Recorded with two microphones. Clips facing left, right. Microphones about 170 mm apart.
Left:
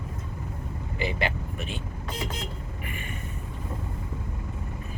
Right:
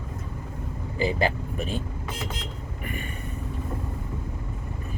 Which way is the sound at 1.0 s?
35° right (ahead or behind).